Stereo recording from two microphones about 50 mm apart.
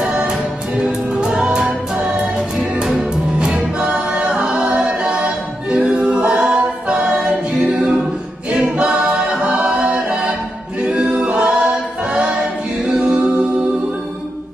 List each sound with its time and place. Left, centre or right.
0.0 s music: centre
3.3 s music: right
8.5 s a capella: right
10.9 s choir: right